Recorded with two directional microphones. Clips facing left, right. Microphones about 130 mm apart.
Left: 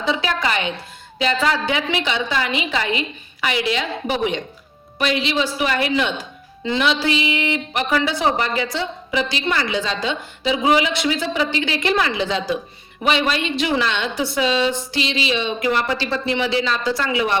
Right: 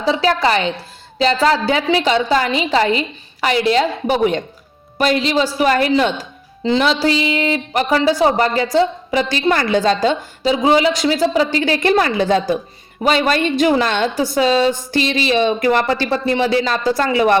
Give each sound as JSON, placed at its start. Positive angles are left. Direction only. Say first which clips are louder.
{"t": 0.0, "sound": "a woman's voice", "louder": "right 6 dB", "side_deg": -35}